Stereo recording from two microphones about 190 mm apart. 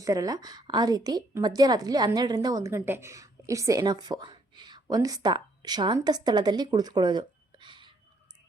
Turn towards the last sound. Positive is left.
turn(degrees=-25)  # may be behind; listen again after turning